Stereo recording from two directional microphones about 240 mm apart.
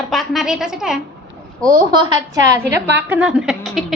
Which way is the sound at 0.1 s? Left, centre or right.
Centre.